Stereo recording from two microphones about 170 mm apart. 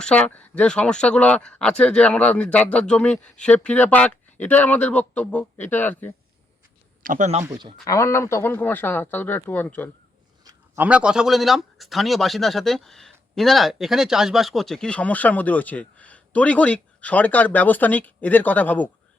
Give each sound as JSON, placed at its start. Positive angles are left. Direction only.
{"t": 0.0, "sound": "speech", "side_deg": 5}
{"t": 7.0, "sound": "speech", "side_deg": -50}
{"t": 7.4, "sound": "speech", "side_deg": -20}
{"t": 7.9, "sound": "speech", "side_deg": 20}
{"t": 10.8, "sound": "speech", "side_deg": -5}